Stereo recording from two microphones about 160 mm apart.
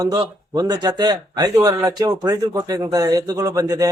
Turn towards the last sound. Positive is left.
turn(degrees=-20)  # may be behind; listen again after turning